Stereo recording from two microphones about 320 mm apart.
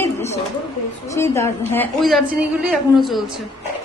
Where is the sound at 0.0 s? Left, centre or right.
Centre.